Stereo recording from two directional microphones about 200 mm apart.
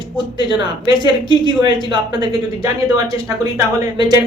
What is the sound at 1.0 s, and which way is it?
Speech, 20° right (ahead or behind).